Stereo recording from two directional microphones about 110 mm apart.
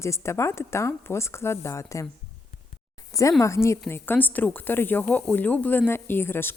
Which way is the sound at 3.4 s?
25° left (ahead or behind).